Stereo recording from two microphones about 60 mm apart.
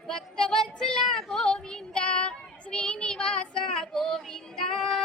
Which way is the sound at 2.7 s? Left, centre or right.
Centre.